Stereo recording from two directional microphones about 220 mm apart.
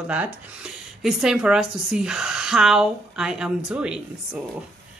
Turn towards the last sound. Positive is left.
turn(degrees=-5)  # may be behind; listen again after turning